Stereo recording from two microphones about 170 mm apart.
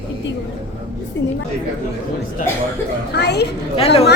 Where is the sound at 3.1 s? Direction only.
80° left.